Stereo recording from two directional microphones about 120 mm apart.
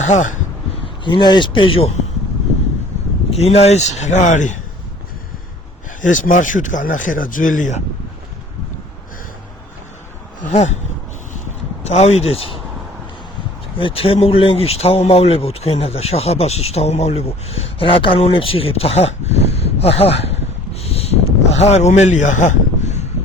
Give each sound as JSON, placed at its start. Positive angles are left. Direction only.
{"t": 0.0, "sound": "speech", "side_deg": 90}
{"t": 1.0, "sound": "speech", "side_deg": 40}
{"t": 3.2, "sound": "a man's voice", "side_deg": 60}
{"t": 6.0, "sound": "speech", "side_deg": 90}
{"t": 10.5, "sound": "a man's voice", "side_deg": 70}
{"t": 11.9, "sound": "speech", "side_deg": 65}
{"t": 13.7, "sound": "speech", "side_deg": 50}
{"t": 20.8, "sound": "a sound", "side_deg": 60}
{"t": 21.6, "sound": "a man's voice", "side_deg": 65}